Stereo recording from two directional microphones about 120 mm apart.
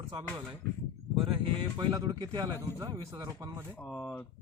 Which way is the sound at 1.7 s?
30° right (ahead or behind).